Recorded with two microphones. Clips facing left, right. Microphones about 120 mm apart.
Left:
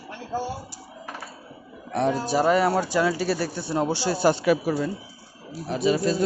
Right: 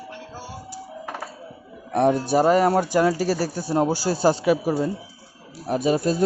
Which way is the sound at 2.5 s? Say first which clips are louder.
Right 2 dB; 40° right (ahead or behind).